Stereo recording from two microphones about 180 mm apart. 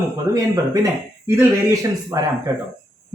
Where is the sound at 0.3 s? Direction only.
20° right (ahead or behind).